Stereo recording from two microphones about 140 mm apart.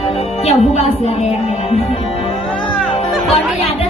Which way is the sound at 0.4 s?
50° left (ahead or behind).